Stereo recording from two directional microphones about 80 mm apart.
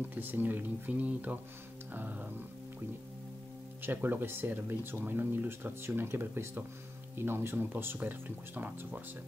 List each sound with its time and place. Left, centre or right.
0.1 s speech: right
3.8 s speech: right